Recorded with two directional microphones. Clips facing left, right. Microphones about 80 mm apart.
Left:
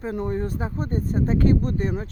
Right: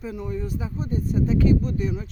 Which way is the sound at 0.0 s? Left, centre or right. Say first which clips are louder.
Left 4 dB; left.